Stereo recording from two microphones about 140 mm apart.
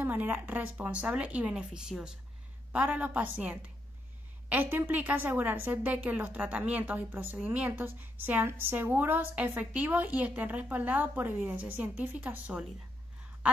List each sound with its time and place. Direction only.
0.0 s a woman's voice: 15° right (ahead or behind)